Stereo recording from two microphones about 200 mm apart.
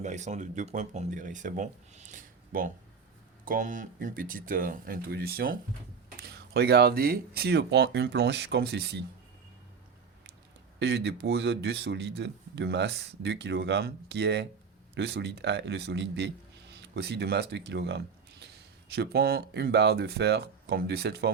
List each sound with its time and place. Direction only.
0.0 s speech: 35° right (ahead or behind); by 9.0 s 55° right (ahead or behind)
10.8 s a man's voice: 55° right (ahead or behind)